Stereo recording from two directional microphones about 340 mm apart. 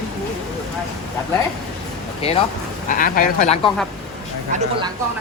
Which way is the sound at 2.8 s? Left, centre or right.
Left.